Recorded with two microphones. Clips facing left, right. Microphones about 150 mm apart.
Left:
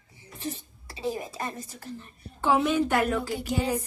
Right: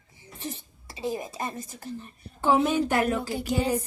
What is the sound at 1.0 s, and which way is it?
Music, 20° right (ahead or behind).